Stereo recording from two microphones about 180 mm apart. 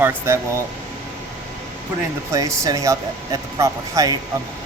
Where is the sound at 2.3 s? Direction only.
20° right (ahead or behind).